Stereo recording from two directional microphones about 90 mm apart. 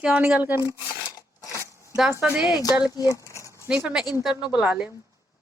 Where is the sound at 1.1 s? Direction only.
45° left (ahead or behind).